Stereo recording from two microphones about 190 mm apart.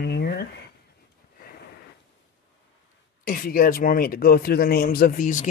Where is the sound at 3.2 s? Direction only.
50° left (ahead or behind).